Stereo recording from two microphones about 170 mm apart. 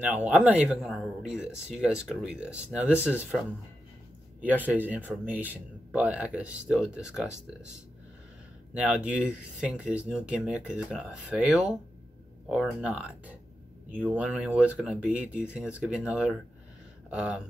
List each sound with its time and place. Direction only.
0.0 s speech: 10° right (ahead or behind)
4.4 s speech: 10° right (ahead or behind)
8.7 s speech: 5° right (ahead or behind)